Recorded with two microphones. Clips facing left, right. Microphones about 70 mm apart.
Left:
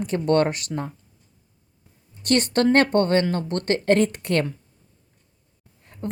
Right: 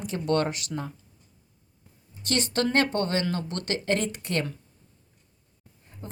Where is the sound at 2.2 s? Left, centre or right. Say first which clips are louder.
Left 7 dB; left.